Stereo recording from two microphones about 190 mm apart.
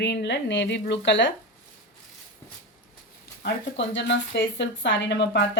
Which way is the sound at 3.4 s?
70° left (ahead or behind).